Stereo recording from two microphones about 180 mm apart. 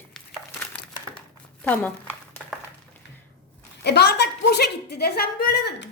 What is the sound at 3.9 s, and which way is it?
A woman's voice, 65° left (ahead or behind).